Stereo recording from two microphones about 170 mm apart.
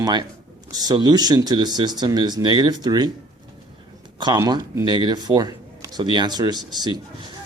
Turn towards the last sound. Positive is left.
turn(degrees=-25)  # may be behind; listen again after turning